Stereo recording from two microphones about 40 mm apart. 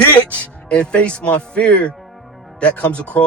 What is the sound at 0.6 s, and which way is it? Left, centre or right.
Speech, left.